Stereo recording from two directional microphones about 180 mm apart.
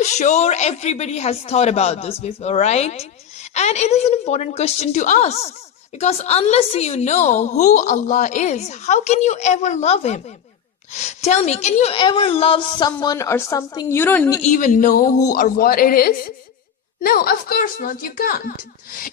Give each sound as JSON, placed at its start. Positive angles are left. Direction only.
{"t": 0.0, "sound": "a woman's voice", "side_deg": 40}
{"t": 14.4, "sound": "a man's voice", "side_deg": 45}